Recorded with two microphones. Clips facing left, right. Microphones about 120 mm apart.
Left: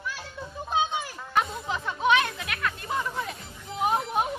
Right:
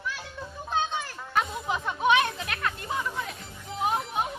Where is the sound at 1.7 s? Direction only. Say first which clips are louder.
Right 2 dB; 15° right (ahead or behind).